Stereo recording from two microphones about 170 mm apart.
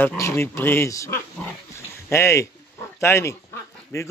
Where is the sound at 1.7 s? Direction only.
15° left (ahead or behind).